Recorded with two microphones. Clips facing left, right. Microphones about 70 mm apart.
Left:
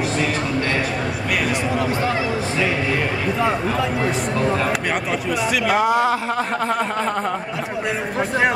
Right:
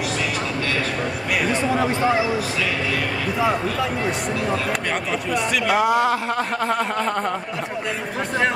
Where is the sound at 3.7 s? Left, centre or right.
Centre.